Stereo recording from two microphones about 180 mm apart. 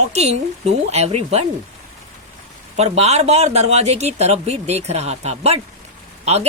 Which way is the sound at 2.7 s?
35° right (ahead or behind).